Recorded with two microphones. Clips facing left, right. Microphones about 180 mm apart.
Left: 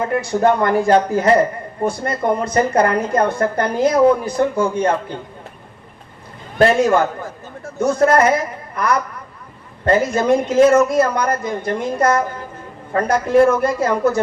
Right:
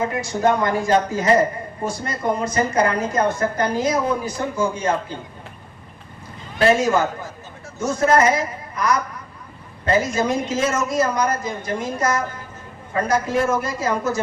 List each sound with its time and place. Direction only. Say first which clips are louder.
0.1 s a woman's voice: left 4 dB; 60° left (ahead or behind)
6.6 s a woman's voice: left 3 dB; 55° left (ahead or behind)